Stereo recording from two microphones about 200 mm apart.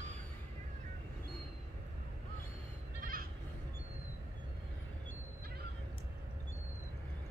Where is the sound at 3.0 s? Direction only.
45° right (ahead or behind).